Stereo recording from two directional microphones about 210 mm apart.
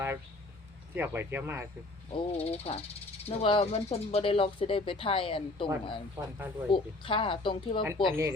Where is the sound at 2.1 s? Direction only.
30° left (ahead or behind).